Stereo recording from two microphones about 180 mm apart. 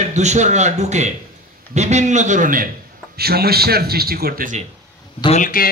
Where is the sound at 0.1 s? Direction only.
40° right (ahead or behind).